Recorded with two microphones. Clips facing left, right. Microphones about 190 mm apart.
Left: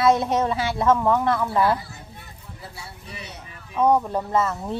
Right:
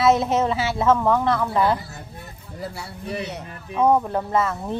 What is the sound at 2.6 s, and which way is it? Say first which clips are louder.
Speech: right 9 dB; 65° right (ahead or behind).